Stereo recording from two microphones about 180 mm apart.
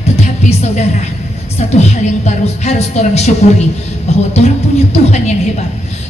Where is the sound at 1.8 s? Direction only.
40° left (ahead or behind).